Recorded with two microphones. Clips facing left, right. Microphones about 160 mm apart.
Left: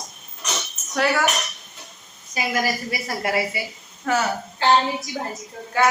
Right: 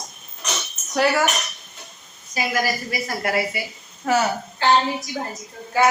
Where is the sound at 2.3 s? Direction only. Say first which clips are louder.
Right 1 dB; 25° left (ahead or behind).